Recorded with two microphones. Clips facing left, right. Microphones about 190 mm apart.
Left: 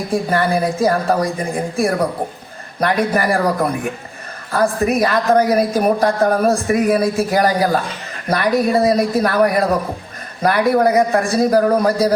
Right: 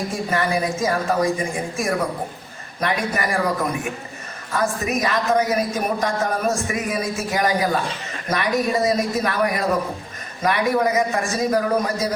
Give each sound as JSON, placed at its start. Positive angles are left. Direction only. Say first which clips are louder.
{"t": 0.1, "sound": "a man's voice", "louder": "left 8 dB", "side_deg": 35}